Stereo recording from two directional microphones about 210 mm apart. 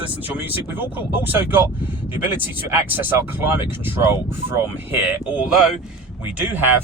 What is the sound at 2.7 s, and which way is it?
Speech, 10° right (ahead or behind).